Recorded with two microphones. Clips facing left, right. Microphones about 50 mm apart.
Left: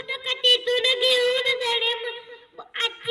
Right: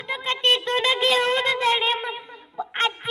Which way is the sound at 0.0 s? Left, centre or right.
Right.